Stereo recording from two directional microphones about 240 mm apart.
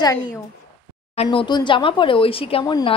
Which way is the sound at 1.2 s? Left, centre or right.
Left.